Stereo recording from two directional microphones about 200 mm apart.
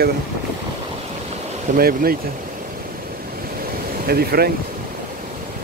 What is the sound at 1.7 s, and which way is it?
Speech, 50° right (ahead or behind).